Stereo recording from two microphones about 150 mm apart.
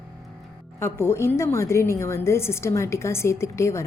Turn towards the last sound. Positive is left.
turn(degrees=20)  # may be behind; listen again after turning